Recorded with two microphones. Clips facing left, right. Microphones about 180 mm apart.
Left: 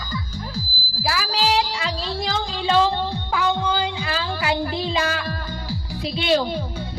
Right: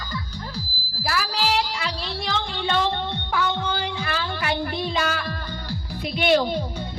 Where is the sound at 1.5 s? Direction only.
90° left.